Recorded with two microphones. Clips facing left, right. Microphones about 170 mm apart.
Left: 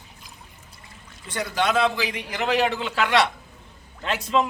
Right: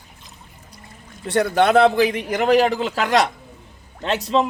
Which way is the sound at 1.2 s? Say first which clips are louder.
Right 8 dB; 60° right (ahead or behind).